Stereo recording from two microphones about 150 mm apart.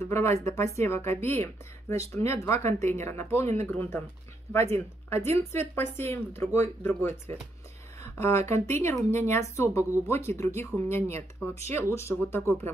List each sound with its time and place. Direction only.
0.0 s speech: 15° left (ahead or behind)